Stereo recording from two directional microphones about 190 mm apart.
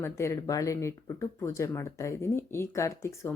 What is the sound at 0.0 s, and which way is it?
Speech, 15° left (ahead or behind).